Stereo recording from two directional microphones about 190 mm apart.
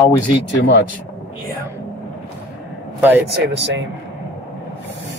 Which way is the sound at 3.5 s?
70° right (ahead or behind).